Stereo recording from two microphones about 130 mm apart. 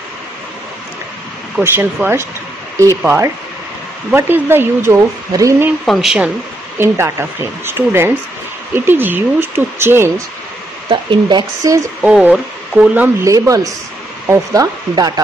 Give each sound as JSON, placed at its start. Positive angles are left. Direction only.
{"t": 1.6, "sound": "speech", "side_deg": -15}
{"t": 5.9, "sound": "speech", "side_deg": 0}
{"t": 6.8, "sound": "speech", "side_deg": -20}
{"t": 10.9, "sound": "speech", "side_deg": -40}
{"t": 12.0, "sound": "speech", "side_deg": -10}
{"t": 13.2, "sound": "speech", "side_deg": -25}